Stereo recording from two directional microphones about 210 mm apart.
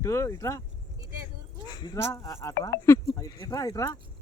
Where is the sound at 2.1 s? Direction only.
15° left (ahead or behind).